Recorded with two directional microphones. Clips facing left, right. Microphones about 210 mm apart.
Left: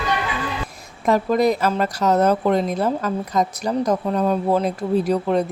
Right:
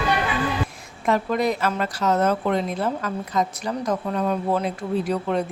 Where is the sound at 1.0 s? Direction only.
40° left (ahead or behind).